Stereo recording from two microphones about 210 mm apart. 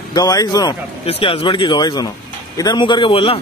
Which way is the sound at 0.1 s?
15° left (ahead or behind).